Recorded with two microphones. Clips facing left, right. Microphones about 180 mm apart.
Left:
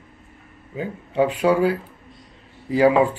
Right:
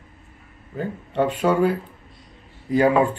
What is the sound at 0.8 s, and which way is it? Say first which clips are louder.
Speech: left 2 dB; 10° left (ahead or behind).